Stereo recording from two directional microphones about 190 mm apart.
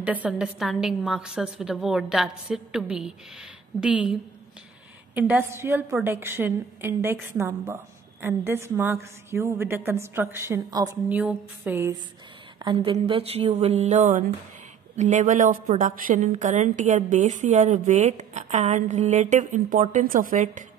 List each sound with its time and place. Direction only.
0.0 s a woman's voice: 5° right (ahead or behind)
12.6 s a woman's voice: 25° right (ahead or behind); by 20.6 s 45° right (ahead or behind)